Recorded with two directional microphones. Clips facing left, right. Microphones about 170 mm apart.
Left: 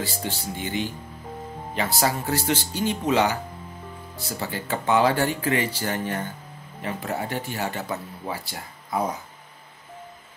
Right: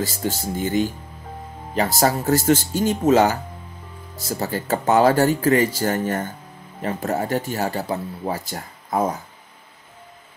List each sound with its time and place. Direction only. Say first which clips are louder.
0.0 s speech: right 5 dB; 40° right (ahead or behind)